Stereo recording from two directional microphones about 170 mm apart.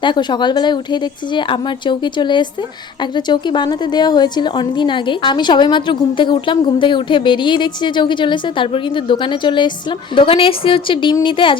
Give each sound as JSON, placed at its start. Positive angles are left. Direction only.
{"t": 0.0, "sound": "speech", "side_deg": 25}